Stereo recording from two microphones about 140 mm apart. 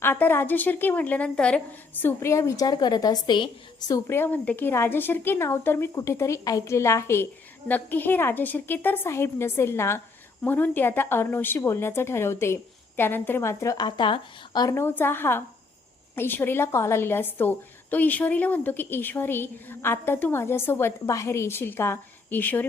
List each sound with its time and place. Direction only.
0.0 s a woman's voice: 15° left (ahead or behind)